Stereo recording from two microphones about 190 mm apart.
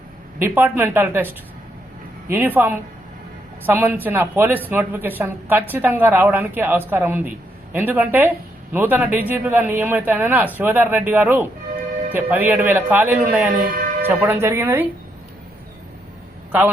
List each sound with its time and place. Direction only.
0.4 s speech: 10° right (ahead or behind)
2.3 s speech: 10° right (ahead or behind)
13.6 s speech: 50° right (ahead or behind)
14.0 s speech: 10° right (ahead or behind)
16.5 s a man's voice: 10° right (ahead or behind)